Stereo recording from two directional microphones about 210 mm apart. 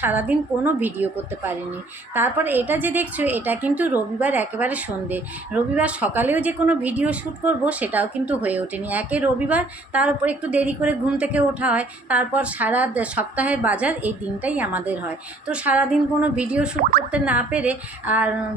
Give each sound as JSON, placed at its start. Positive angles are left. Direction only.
{"t": 0.0, "sound": "a woman's voice", "side_deg": -10}